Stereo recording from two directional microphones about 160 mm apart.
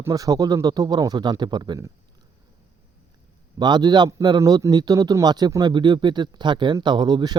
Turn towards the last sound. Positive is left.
turn(degrees=-25)  # may be behind; listen again after turning